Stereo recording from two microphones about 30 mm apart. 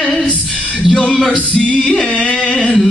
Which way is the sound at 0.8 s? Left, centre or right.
Left.